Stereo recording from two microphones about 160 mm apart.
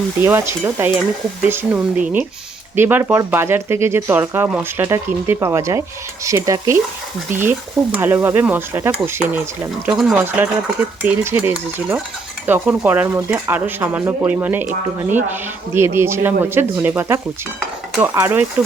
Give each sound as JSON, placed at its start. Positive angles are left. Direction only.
{"t": 0.2, "sound": "speech", "side_deg": -15}
{"t": 6.2, "sound": "stir", "side_deg": -20}
{"t": 7.3, "sound": "speech", "side_deg": -15}